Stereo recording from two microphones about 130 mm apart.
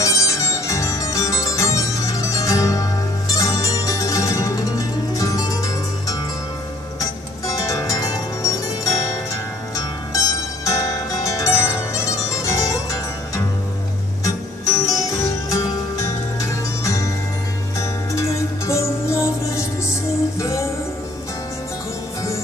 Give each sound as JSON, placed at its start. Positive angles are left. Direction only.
{"t": 0.0, "sound": "music", "side_deg": 25}
{"t": 18.7, "sound": "music", "side_deg": 20}